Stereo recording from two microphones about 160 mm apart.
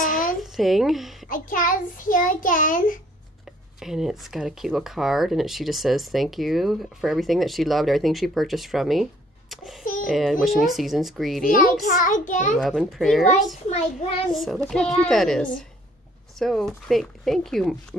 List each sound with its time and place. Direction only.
0.0 s a sound: 55° left (ahead or behind)
0.4 s a woman's voice: centre (ahead or behind)
1.3 s a child's voice: 55° left (ahead or behind)
3.8 s a child's voice: centre (ahead or behind)
11.5 s a child's voice: 55° left (ahead or behind)
12.5 s speech: centre (ahead or behind)
14.3 s speech: centre (ahead or behind)